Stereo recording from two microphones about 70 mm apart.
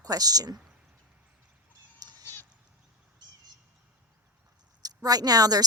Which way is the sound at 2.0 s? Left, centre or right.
Right.